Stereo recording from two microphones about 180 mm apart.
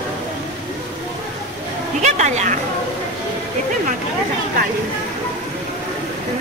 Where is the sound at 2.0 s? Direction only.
40° right (ahead or behind).